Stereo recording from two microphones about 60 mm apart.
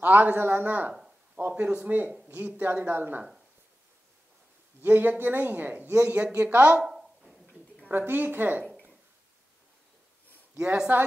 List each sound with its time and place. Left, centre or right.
0.0 s speech: right
4.8 s speech: right
6.8 s a sound: centre
7.9 s speech: right
10.5 s speech: centre